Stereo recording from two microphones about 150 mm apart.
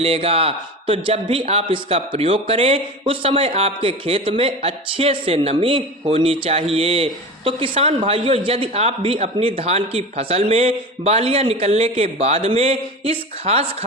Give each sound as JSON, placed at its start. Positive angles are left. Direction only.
{"t": 0.0, "sound": "a man's voice", "side_deg": -40}